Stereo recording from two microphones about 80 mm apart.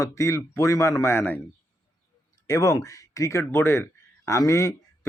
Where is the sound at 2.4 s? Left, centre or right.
Left.